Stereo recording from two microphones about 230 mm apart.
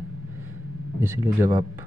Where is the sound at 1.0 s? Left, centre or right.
Centre.